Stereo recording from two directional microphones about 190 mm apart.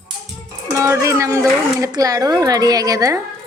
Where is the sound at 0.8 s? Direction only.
15° right (ahead or behind).